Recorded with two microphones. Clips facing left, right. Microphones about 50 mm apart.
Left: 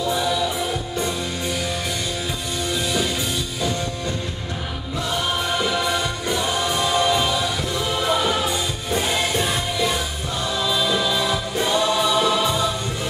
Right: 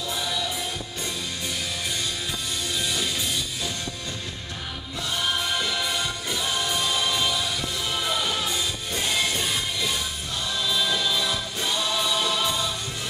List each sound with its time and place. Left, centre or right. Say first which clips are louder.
0.2 s music: left 7 dB; centre
2.7 s music: left 6 dB; centre
5.1 s music: left 3 dB; centre
10.6 s choir: left 4 dB; centre